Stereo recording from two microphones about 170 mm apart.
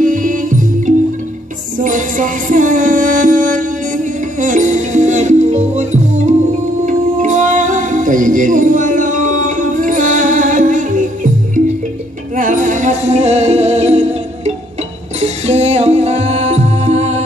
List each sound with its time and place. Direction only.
0.0 s music: 50° right (ahead or behind)
12.4 s music: 50° right (ahead or behind)